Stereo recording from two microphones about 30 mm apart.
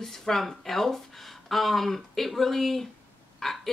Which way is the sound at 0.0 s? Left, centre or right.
Centre.